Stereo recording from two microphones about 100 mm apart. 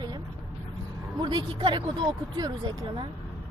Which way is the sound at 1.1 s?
50° right (ahead or behind).